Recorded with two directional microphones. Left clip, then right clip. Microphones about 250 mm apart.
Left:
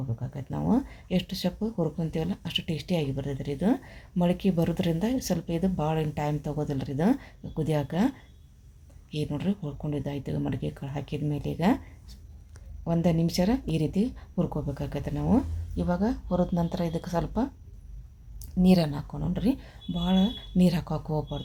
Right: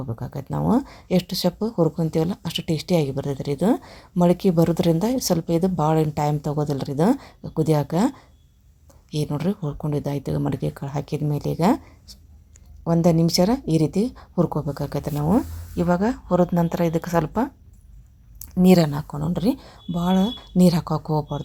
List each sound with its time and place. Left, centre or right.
0.1 s speech: right